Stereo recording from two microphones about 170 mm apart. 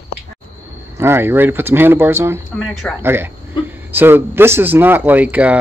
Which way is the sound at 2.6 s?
Centre (ahead or behind).